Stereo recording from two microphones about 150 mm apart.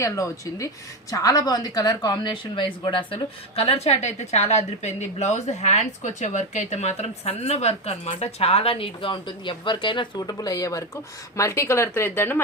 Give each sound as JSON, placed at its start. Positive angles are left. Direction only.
{"t": 0.0, "sound": "a woman's voice", "side_deg": 20}